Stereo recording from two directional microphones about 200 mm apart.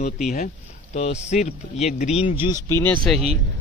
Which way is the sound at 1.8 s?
35° left (ahead or behind).